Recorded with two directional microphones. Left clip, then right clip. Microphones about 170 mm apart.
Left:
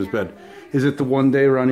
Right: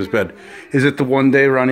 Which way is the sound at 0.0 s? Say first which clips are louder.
Right 5 dB; 15° right (ahead or behind).